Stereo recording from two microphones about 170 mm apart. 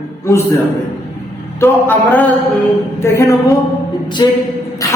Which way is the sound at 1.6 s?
10° left (ahead or behind).